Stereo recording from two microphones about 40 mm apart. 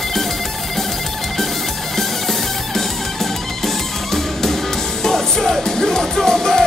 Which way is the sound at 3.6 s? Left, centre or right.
Centre.